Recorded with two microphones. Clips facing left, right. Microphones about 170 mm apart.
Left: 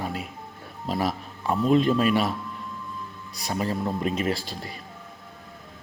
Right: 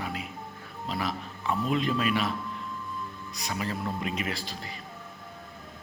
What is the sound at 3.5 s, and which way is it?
Speech, 35° left (ahead or behind).